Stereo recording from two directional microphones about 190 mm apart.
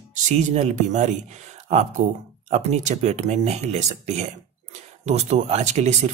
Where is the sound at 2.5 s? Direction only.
35° right (ahead or behind).